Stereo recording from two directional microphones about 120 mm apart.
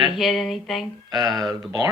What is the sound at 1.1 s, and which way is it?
Speech, 30° right (ahead or behind).